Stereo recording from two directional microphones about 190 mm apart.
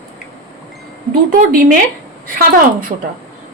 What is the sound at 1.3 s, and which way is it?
A woman's voice, 45° right (ahead or behind).